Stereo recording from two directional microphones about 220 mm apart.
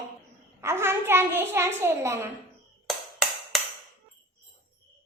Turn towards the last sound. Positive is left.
turn(degrees=0)  # may be behind; listen again after turning